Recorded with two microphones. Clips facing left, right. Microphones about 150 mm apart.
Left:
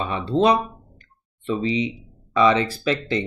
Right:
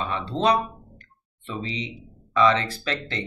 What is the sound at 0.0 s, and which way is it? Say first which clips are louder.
Speech: left 4 dB; 10° left (ahead or behind).